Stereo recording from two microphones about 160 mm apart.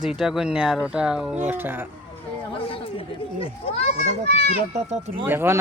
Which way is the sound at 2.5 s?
35° left (ahead or behind).